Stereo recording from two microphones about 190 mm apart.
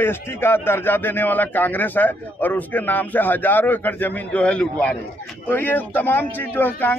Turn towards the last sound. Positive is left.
turn(degrees=10)  # may be behind; listen again after turning